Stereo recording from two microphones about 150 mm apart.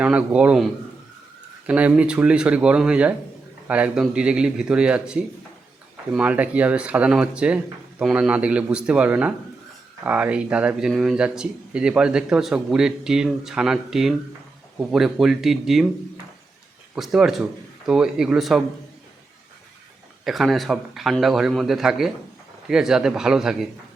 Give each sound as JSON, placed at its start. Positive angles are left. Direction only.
{"t": 0.0, "sound": "speech", "side_deg": -10}
{"t": 1.6, "sound": "speech", "side_deg": -10}
{"t": 16.9, "sound": "speech", "side_deg": -5}
{"t": 20.2, "sound": "speech", "side_deg": 0}